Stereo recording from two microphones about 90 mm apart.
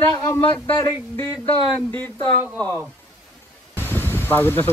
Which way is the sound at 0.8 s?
30° left (ahead or behind).